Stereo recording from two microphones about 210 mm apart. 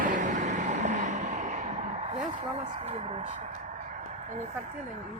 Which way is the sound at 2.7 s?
30° right (ahead or behind).